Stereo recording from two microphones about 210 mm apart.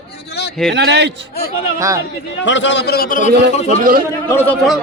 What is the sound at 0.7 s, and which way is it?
Speech, 55° right (ahead or behind).